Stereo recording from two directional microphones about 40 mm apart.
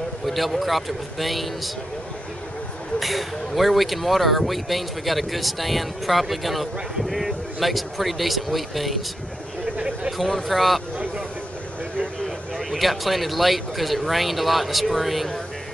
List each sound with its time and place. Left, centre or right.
0.3 s speech: centre
3.0 s speech: centre
9.8 s a sound: right
10.1 s speech: centre
12.5 s speech: centre